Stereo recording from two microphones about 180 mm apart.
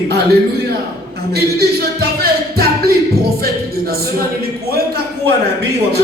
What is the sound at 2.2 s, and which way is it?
Music, 55° right (ahead or behind).